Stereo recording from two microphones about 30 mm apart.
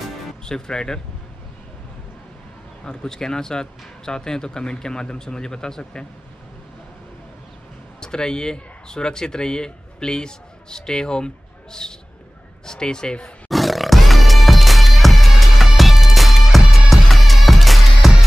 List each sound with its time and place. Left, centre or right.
0.5 s speech: left
2.8 s speech: left
8.0 s speech: left
13.5 s music: centre